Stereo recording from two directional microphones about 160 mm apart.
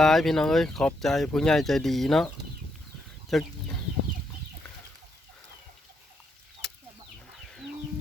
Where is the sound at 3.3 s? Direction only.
Centre (ahead or behind).